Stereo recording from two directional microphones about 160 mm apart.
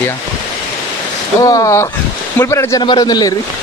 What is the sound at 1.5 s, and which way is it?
A man's voice, 20° left (ahead or behind).